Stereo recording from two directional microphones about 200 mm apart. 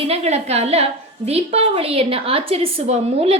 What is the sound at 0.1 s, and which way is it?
A woman's voice, 30° right (ahead or behind).